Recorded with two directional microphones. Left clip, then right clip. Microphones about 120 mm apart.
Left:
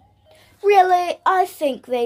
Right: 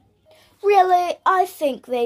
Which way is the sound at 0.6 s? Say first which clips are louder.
Left 1 dB; 5° right (ahead or behind).